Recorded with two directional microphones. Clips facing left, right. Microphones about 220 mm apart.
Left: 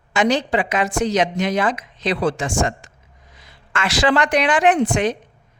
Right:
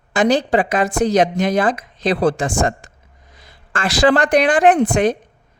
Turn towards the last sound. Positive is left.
turn(degrees=-50)  # may be behind; listen again after turning